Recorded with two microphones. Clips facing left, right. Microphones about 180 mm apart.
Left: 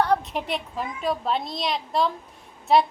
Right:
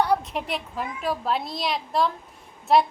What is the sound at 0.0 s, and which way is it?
A woman's voice, 5° right (ahead or behind).